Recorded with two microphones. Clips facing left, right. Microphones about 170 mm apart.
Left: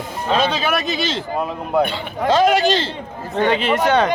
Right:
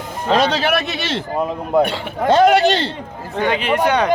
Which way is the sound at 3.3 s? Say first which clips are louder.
Left 1 dB; 10° right (ahead or behind).